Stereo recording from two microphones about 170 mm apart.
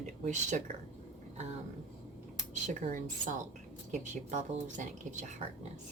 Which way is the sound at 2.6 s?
45° right (ahead or behind).